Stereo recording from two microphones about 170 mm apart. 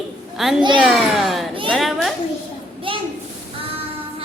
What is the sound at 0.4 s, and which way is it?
A woman's voice, centre (ahead or behind).